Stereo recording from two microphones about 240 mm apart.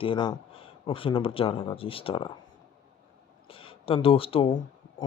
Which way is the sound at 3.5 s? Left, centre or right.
Left.